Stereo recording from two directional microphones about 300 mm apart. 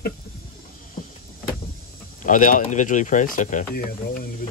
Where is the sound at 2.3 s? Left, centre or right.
Left.